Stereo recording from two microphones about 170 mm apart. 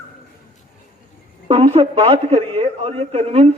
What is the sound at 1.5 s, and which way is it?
A man's voice, 35° right (ahead or behind).